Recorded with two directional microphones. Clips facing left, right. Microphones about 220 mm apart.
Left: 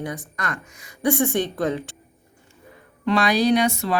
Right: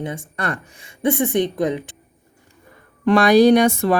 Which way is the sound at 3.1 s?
50° right (ahead or behind).